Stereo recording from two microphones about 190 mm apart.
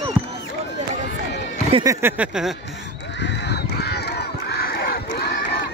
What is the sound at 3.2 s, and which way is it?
Crowd, 60° left (ahead or behind).